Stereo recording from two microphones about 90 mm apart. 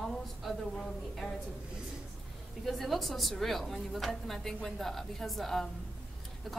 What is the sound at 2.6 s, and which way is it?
A woman's voice, centre (ahead or behind).